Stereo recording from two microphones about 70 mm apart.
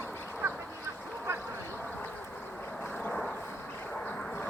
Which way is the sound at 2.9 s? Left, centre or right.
Left.